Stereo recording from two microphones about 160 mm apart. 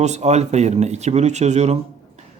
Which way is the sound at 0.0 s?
45° right (ahead or behind).